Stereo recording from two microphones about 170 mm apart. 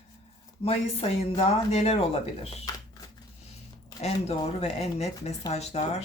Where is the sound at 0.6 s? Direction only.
35° left (ahead or behind).